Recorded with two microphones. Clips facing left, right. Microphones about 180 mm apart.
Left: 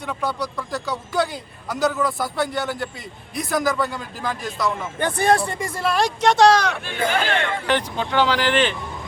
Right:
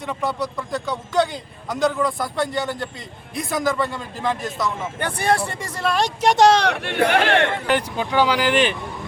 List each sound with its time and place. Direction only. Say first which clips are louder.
0.0 s a man's voice: right 1 dB; centre (ahead or behind)
5.0 s speech: left 3 dB; 10° right (ahead or behind)
5.5 s speech: left 1 dB; 15° left (ahead or behind)
6.2 s speech: even; 15° right (ahead or behind)
6.7 s speech: right 4 dB; 70° right (ahead or behind)
7.7 s speech: right 1 dB; 10° right (ahead or behind)